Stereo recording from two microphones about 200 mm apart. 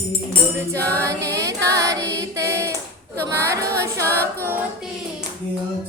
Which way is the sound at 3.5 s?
55° right (ahead or behind).